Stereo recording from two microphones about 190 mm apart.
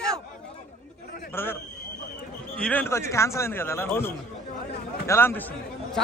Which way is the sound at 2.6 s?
10° left (ahead or behind).